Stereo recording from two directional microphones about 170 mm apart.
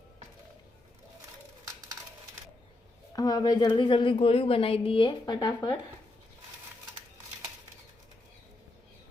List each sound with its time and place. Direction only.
3.1 s a woman's voice: 20° left (ahead or behind)